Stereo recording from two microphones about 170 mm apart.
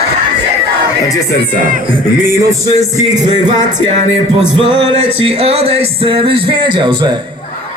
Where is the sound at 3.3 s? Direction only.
25° right (ahead or behind).